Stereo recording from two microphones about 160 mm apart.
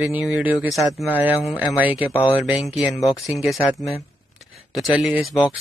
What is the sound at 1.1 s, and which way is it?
Speech, 10° right (ahead or behind).